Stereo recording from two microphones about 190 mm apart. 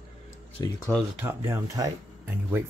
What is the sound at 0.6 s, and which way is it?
Speech, 20° left (ahead or behind).